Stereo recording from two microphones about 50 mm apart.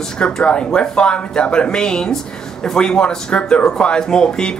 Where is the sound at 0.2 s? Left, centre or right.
Centre.